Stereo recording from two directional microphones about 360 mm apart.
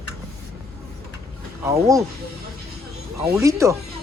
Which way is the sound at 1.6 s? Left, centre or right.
Centre.